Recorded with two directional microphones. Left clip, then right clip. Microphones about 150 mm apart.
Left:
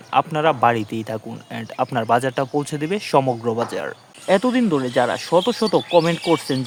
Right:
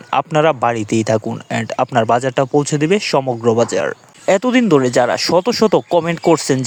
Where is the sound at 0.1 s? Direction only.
40° right (ahead or behind).